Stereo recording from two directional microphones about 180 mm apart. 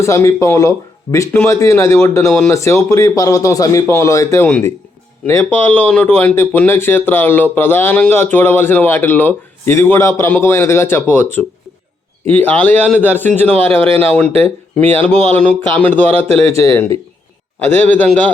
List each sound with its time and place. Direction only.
0.0 s speech: 15° left (ahead or behind)
4.4 s speech: 5° left (ahead or behind)